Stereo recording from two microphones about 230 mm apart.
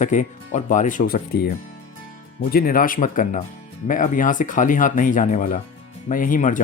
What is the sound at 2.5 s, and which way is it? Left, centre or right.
Speech, left.